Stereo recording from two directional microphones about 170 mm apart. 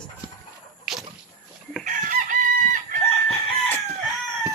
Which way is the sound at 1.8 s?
50° right (ahead or behind).